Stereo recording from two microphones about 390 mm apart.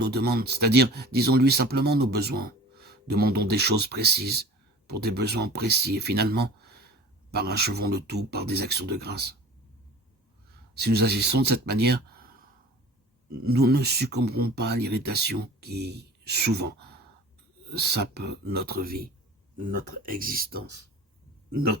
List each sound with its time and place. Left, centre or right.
0.0 s speech: right
10.8 s speech: right
13.4 s speech: right